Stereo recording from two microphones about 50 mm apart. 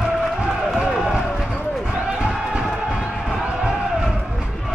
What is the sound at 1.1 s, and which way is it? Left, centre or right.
Basketball bounce, centre.